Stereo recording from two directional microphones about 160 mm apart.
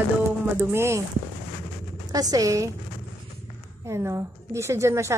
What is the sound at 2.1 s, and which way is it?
Speech, 20° right (ahead or behind).